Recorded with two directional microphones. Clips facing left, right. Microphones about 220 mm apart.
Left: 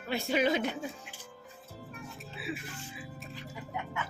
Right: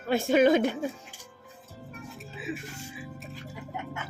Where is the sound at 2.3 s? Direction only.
20° right (ahead or behind).